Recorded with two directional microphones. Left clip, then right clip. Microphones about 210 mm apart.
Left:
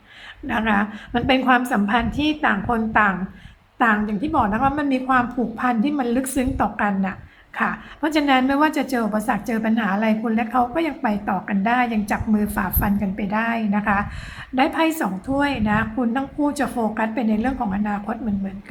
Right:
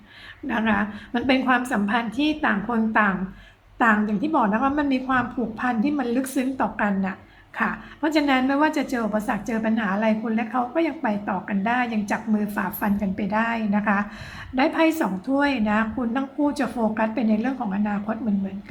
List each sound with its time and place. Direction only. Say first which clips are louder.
0.4 s a woman's voice: left 3 dB; centre (ahead or behind)